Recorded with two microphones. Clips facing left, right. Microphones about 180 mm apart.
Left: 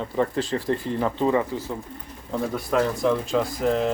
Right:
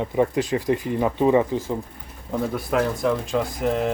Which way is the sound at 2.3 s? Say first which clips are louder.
Right 1 dB; 5° right (ahead or behind).